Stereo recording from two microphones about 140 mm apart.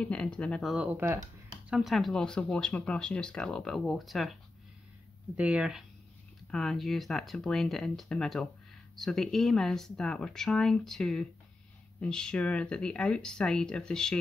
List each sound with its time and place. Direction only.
0.0 s speech: 5° left (ahead or behind)
0.9 s speech: 15° right (ahead or behind)
1.7 s speech: centre (ahead or behind)
5.4 s speech: 5° right (ahead or behind)